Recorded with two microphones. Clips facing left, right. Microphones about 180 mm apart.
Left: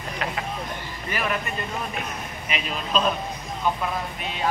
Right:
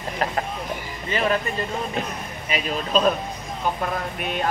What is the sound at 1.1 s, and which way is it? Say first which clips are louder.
Speech: right 5 dB; 25° right (ahead or behind).